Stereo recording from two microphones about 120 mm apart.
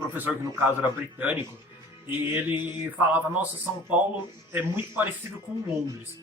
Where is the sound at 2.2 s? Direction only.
15° right (ahead or behind).